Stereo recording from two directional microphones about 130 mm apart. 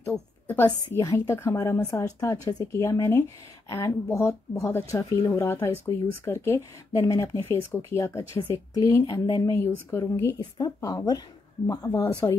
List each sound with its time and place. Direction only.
0.9 s speech: 25° left (ahead or behind)